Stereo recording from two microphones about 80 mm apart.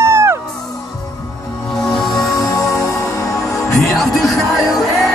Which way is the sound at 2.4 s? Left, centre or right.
Left.